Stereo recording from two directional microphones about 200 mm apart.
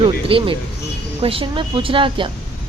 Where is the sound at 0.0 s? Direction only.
25° right (ahead or behind).